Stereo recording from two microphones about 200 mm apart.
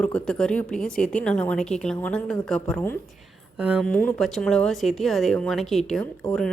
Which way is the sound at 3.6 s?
5° right (ahead or behind).